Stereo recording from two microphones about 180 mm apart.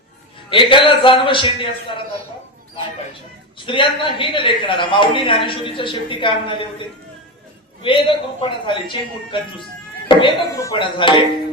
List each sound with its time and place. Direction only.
0.5 s speech: 30° left (ahead or behind)
3.7 s speech: 30° left (ahead or behind)